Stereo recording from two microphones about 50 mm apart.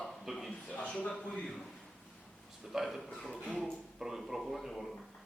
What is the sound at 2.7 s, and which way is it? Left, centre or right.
Speech, centre.